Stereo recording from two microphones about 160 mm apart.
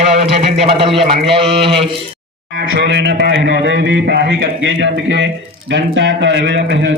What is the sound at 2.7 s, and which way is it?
A man's voice, 90° right.